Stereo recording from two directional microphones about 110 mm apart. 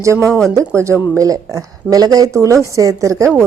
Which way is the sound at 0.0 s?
25° right (ahead or behind).